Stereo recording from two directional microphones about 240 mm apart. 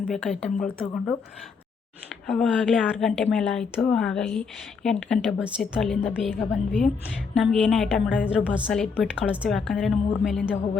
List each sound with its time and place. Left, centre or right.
0.1 s speech: centre
2.2 s speech: centre